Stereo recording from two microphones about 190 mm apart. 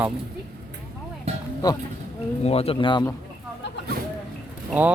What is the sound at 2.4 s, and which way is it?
Speech, 30° left (ahead or behind).